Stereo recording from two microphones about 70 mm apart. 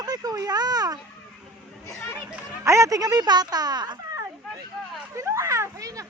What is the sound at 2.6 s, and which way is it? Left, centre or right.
Speech, right.